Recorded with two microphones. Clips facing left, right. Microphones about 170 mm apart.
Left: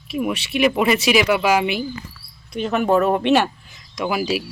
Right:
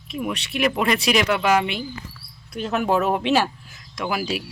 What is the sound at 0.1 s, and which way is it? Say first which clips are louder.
Speech: left 5 dB; 5° left (ahead or behind).